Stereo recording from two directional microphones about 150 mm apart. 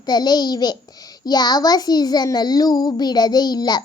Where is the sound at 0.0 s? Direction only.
25° left (ahead or behind).